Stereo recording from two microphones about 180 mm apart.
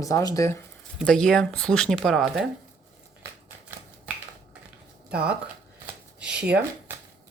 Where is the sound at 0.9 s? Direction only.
5° left (ahead or behind).